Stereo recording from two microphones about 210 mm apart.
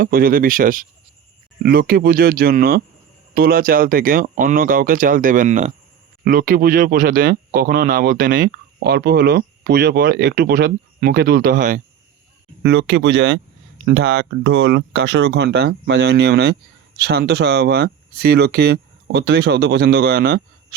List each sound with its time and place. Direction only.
0.0 s speech: 45° right (ahead or behind)
12.6 s speech: 60° right (ahead or behind)